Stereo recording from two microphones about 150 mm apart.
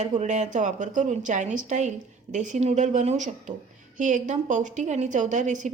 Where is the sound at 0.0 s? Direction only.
50° right (ahead or behind).